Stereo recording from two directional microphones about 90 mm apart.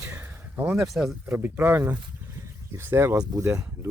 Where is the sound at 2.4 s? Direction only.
30° right (ahead or behind).